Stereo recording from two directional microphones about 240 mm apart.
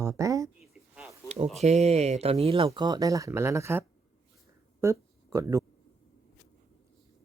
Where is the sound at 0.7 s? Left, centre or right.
Centre.